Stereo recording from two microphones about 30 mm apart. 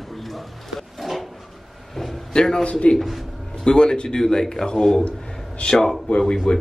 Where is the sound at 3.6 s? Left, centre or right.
Left.